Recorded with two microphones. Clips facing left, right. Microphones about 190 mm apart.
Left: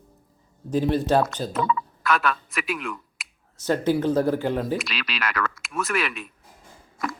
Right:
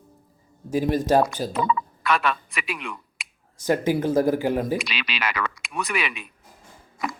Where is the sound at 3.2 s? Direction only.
Centre (ahead or behind).